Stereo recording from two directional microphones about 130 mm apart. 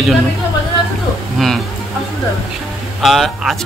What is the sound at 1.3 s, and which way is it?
Speech, centre (ahead or behind).